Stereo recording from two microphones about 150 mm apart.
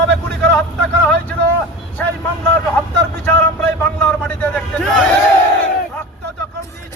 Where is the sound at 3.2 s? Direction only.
10° left (ahead or behind).